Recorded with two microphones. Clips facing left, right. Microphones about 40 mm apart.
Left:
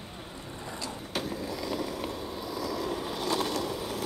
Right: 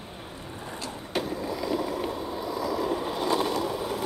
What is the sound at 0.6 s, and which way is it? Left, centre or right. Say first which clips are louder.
Vehicle: right 1 dB; right.